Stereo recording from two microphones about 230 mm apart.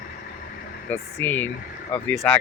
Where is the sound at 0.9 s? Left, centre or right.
Centre.